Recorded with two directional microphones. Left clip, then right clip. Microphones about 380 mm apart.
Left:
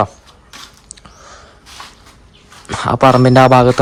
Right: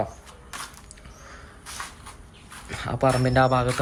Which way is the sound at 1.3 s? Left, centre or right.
Centre.